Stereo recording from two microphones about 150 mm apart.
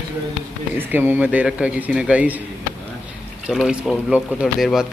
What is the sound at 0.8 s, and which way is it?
Speech, 15° right (ahead or behind).